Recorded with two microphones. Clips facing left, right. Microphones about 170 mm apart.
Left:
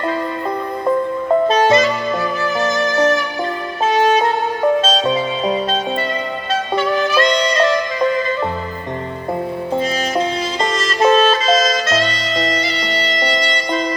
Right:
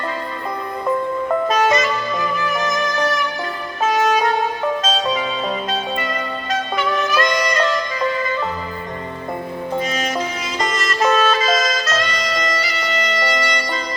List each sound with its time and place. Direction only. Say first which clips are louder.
1.5 s music: left 3 dB; 30° left (ahead or behind)
6.5 s music: left 4 dB; 30° left (ahead or behind)
9.7 s music: left 3 dB; 30° left (ahead or behind)